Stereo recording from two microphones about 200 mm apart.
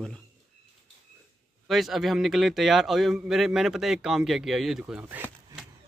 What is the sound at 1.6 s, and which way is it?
A man's voice, centre (ahead or behind).